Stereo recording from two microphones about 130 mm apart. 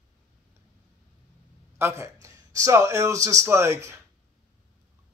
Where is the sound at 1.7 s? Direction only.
20° right (ahead or behind).